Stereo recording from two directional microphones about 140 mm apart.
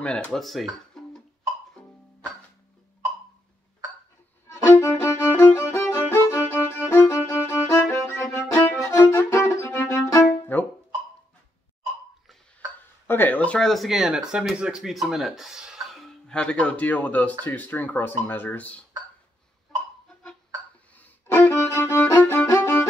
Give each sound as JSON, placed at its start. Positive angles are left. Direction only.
{"t": 0.0, "sound": "speech", "side_deg": 5}
{"t": 4.5, "sound": "violin", "side_deg": 15}
{"t": 13.0, "sound": "speech", "side_deg": 15}
{"t": 20.9, "sound": "music", "side_deg": 10}